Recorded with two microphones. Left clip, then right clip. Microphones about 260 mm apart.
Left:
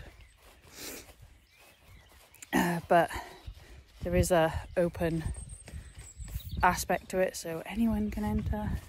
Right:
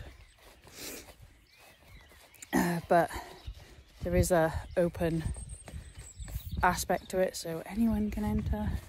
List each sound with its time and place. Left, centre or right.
0.7 s zipper: centre
2.4 s a sound: centre
6.6 s a woman's voice: centre